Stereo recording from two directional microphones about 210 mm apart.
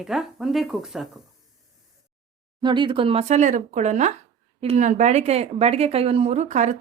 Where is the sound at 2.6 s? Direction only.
20° right (ahead or behind).